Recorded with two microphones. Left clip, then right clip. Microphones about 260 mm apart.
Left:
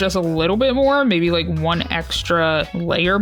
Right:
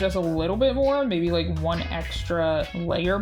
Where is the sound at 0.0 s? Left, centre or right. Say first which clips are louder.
Left 6 dB; left.